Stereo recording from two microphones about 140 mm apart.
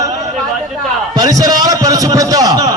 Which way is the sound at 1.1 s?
25° right (ahead or behind).